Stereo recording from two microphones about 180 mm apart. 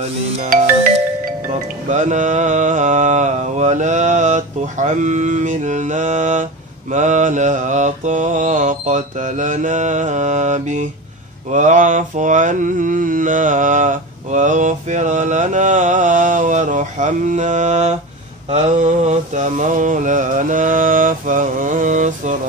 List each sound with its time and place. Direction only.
0.0 s music: 35° right (ahead or behind)
1.9 s mantra: 45° right (ahead or behind)